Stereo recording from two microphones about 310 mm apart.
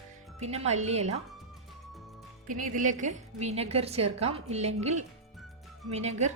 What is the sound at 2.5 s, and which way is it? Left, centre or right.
A woman's voice, right.